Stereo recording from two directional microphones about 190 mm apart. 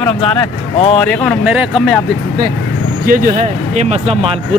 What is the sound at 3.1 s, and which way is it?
Speech, 40° right (ahead or behind).